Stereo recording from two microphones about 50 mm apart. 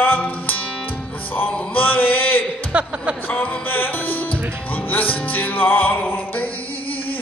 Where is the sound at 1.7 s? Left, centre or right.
Left.